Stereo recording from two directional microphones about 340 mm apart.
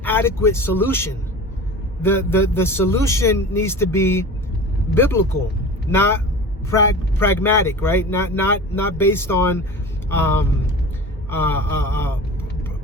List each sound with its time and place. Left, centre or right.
0.0 s speech: centre